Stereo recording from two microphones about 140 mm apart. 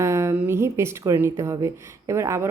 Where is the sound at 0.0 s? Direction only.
20° right (ahead or behind).